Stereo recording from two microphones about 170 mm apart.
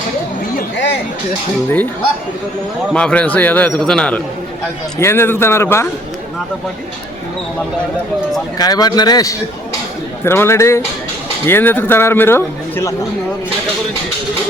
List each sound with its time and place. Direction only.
2.9 s a man's voice: 5° left (ahead or behind)
8.5 s a man's voice: 20° left (ahead or behind)